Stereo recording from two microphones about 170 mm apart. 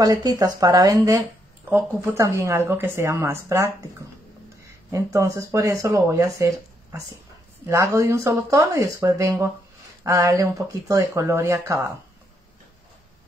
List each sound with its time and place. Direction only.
0.0 s speech: 20° right (ahead or behind)
4.9 s speech: 20° right (ahead or behind)